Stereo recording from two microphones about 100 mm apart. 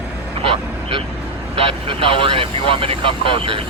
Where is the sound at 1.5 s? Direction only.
60° right (ahead or behind).